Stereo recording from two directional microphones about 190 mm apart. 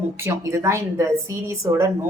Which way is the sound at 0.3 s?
15° right (ahead or behind).